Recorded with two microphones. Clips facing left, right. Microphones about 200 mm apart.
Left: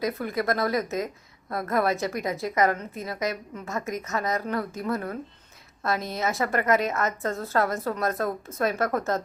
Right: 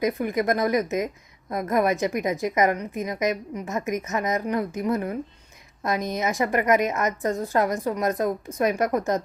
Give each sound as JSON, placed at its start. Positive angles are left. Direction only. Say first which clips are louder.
{"t": 0.0, "sound": "a woman's voice", "louder": "right 4 dB", "side_deg": -15}